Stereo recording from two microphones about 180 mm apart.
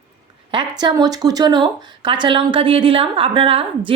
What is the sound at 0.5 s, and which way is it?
A woman's voice, 25° right (ahead or behind).